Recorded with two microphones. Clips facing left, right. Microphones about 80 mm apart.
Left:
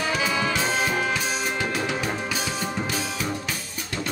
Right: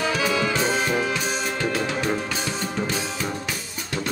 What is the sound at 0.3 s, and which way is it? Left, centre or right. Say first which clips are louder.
Brass instrument: right 2 dB; centre.